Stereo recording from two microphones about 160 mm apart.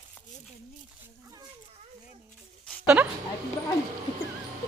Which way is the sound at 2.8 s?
10° right (ahead or behind).